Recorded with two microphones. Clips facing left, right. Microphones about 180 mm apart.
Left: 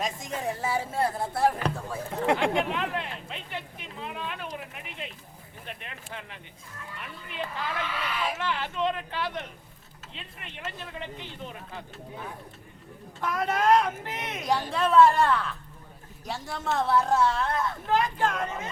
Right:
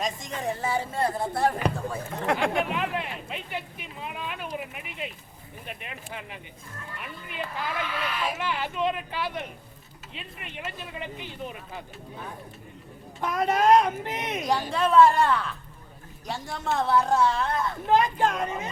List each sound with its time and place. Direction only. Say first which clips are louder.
0.0 s speech: right 1 dB; 5° left (ahead or behind)
2.2 s speech: left 1 dB; 25° left (ahead or behind)
2.6 s a sound: right 1 dB; 10° right (ahead or behind)
5.6 s speech: right 2 dB; 10° right (ahead or behind)
13.1 s speech: right 3 dB; 20° right (ahead or behind)
14.4 s speech: even; centre (ahead or behind)
17.8 s speech: right 4 dB; 20° right (ahead or behind)